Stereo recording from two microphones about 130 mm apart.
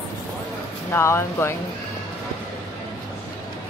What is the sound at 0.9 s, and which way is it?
Speech, 20° left (ahead or behind).